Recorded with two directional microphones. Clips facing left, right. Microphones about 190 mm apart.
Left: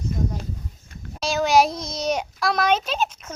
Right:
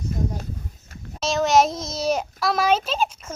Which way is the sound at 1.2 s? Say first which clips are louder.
Even; centre (ahead or behind).